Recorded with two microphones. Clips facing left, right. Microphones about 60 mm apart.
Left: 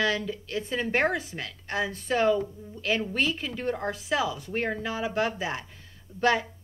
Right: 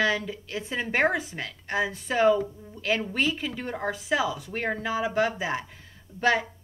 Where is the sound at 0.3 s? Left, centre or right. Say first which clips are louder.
Left 2 dB; centre.